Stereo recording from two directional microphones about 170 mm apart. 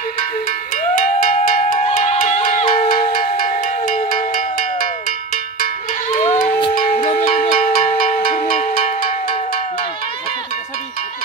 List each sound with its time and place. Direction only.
0.9 s cowbell: 55° left (ahead or behind)
1.8 s music: 40° left (ahead or behind)
2.9 s music: 55° left (ahead or behind)
6.1 s crowd: 50° left (ahead or behind)
6.9 s music: 45° left (ahead or behind)
8.5 s cowbell: 55° left (ahead or behind)